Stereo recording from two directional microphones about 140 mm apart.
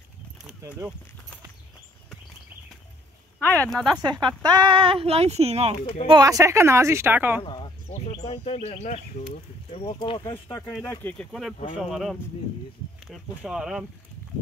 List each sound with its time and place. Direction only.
3.3 s speech: 10° left (ahead or behind)
4.0 s speech: 30° right (ahead or behind); by 5.8 s 50° right (ahead or behind)
6.0 s a woman's voice: 25° right (ahead or behind)
7.4 s a sound: 35° left (ahead or behind)
8.1 s speech: 45° left (ahead or behind)
10.9 s speech: 15° left (ahead or behind)
11.7 s speech: centre (ahead or behind)